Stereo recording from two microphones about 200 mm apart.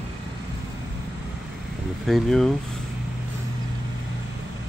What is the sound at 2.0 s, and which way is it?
Speech, centre (ahead or behind).